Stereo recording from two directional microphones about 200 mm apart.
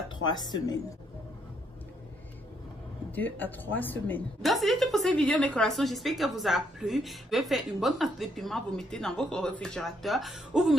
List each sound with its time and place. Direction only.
0.2 s speech: 20° left (ahead or behind)
3.2 s a woman's voice: 10° left (ahead or behind)